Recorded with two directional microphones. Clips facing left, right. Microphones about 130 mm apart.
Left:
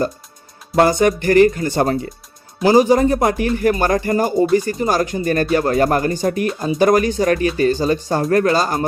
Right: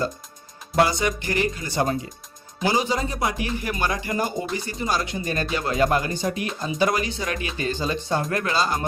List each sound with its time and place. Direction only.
0.8 s speech: 50° left (ahead or behind)